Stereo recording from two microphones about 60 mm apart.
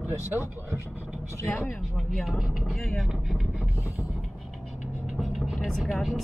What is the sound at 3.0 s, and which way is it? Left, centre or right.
Vehicle, centre.